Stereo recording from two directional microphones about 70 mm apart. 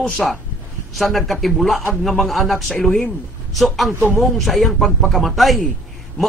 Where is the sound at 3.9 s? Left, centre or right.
Right.